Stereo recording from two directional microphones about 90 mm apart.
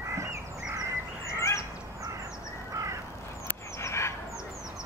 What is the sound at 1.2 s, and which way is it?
Fowl, 35° left (ahead or behind).